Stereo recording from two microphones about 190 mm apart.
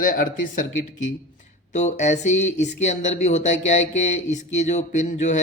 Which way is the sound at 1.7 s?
40° left (ahead or behind).